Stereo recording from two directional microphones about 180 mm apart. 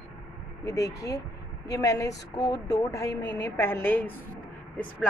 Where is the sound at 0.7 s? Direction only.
20° left (ahead or behind).